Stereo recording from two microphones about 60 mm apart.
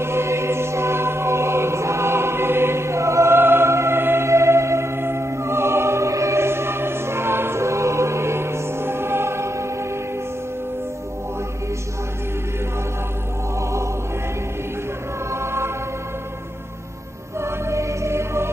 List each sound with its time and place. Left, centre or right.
0.0 s music: right
3.3 s music: right
13.6 s music: right
15.3 s music: right
17.4 s music: right